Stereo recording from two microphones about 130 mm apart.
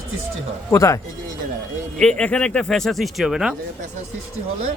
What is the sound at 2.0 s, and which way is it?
Speech, 5° left (ahead or behind).